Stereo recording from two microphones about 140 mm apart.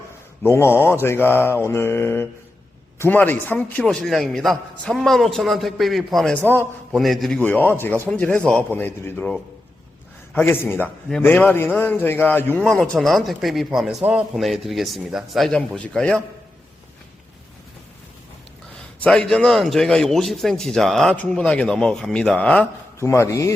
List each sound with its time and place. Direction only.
0.4 s a man's voice: 15° left (ahead or behind)
18.9 s a man's voice: 10° left (ahead or behind)
23.0 s speech: 20° left (ahead or behind)